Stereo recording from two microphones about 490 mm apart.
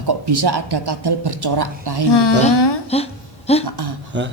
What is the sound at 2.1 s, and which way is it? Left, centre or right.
Speech, left.